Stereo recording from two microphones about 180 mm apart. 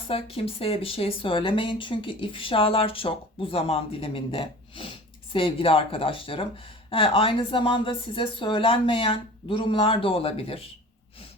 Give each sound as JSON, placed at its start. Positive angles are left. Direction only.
{"t": 0.1, "sound": "speech", "side_deg": 30}